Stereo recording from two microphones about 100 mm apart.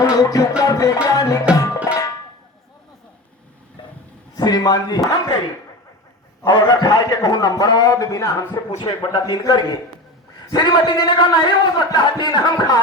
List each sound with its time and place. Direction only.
0.0 s music: 40° left (ahead or behind)
0.6 s a man's voice: 35° left (ahead or behind)
1.5 s music: 35° left (ahead or behind)
4.4 s a man's voice: 40° left (ahead or behind)
8.8 s a man's voice: 50° left (ahead or behind)